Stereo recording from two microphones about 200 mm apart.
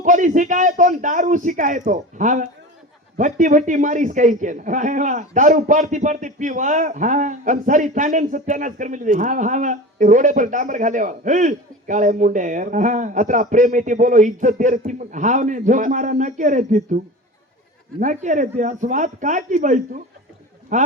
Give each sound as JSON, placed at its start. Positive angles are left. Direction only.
{"t": 0.0, "sound": "a man's voice", "side_deg": -40}
{"t": 18.0, "sound": "a man's voice", "side_deg": -40}